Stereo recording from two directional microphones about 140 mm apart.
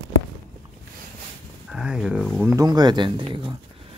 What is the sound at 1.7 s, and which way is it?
Speech, 5° right (ahead or behind).